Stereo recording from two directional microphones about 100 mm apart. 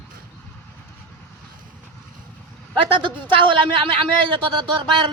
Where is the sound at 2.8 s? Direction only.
60° right (ahead or behind).